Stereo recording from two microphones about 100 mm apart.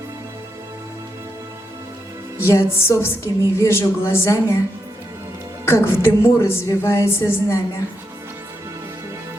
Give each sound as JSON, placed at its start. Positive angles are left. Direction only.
{"t": 2.5, "sound": "a woman's voice", "side_deg": 25}
{"t": 5.7, "sound": "a woman's voice", "side_deg": 25}